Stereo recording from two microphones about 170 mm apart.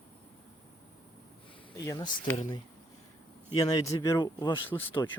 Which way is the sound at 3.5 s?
20° left (ahead or behind).